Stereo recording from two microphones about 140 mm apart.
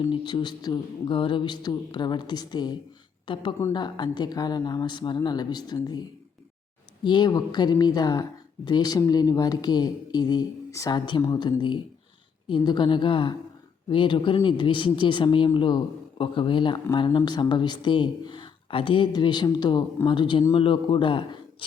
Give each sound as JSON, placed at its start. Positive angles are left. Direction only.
{"t": 0.0, "sound": "speech", "side_deg": 30}
{"t": 7.0, "sound": "speech", "side_deg": 30}